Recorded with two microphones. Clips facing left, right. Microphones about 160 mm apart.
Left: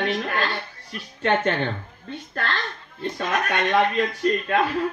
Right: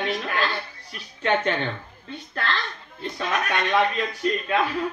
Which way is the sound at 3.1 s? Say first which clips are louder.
Left 1 dB; 45° left (ahead or behind).